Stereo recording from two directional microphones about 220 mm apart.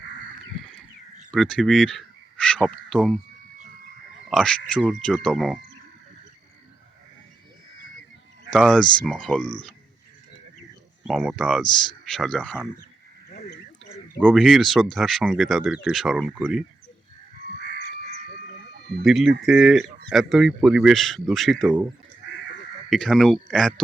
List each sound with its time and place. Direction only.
1.3 s a sound: centre (ahead or behind)
2.6 s speech: centre (ahead or behind)
4.3 s speech: centre (ahead or behind)
8.4 s speech: centre (ahead or behind)
11.0 s speech: centre (ahead or behind)
13.9 s speech: centre (ahead or behind)
18.7 s a sound: 50° right (ahead or behind)
19.0 s speech: centre (ahead or behind)
22.9 s speech: centre (ahead or behind)